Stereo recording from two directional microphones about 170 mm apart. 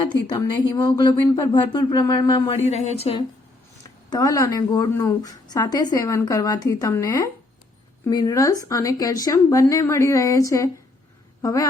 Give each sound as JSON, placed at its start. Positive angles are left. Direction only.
{"t": 0.3, "sound": "a woman's voice", "side_deg": 25}
{"t": 2.6, "sound": "speech", "side_deg": 40}
{"t": 4.1, "sound": "a woman's voice", "side_deg": 20}